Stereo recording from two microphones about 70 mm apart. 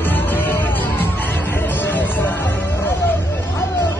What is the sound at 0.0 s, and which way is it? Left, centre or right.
Music, left.